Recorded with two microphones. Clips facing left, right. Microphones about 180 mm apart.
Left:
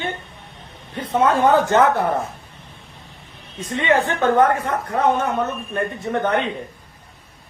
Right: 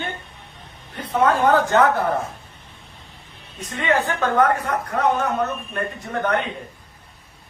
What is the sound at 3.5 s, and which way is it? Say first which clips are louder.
A man's voice: left 3 dB; 25° left (ahead or behind).